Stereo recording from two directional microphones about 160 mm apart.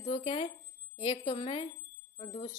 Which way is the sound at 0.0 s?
40° left (ahead or behind).